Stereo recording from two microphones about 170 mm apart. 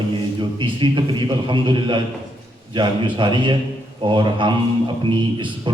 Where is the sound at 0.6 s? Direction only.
30° right (ahead or behind).